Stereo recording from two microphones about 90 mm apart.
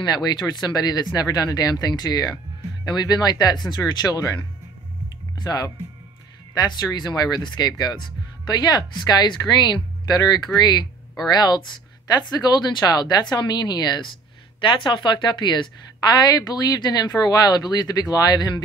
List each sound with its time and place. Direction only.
0.0 s a woman's voice: 50° left (ahead or behind)
5.4 s a woman's voice: 45° left (ahead or behind)
14.6 s a woman's voice: 65° left (ahead or behind); by 18.6 s 45° left (ahead or behind)